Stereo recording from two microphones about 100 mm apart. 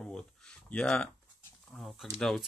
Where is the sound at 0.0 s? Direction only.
10° left (ahead or behind).